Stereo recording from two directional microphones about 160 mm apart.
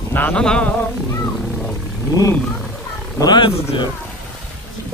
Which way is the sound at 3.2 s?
30° left (ahead or behind).